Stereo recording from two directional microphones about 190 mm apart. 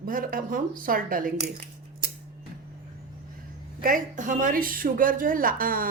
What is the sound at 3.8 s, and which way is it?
Speech, 45° right (ahead or behind).